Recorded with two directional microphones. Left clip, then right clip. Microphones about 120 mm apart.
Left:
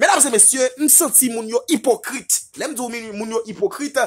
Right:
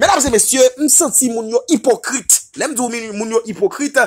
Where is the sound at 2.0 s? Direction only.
30° right (ahead or behind).